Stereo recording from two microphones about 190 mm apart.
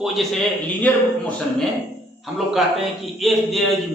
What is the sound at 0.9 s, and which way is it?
Speech, 5° left (ahead or behind).